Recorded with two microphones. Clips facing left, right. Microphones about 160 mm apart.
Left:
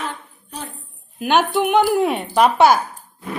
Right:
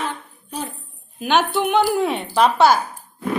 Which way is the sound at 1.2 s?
10° left (ahead or behind).